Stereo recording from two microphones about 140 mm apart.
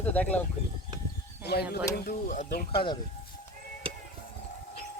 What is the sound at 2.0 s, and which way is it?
Speech, 75° left (ahead or behind).